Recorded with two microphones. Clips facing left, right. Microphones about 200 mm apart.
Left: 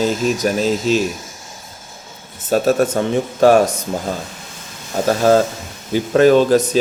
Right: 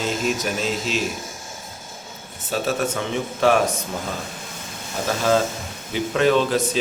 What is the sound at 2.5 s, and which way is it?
Speech, 45° left (ahead or behind).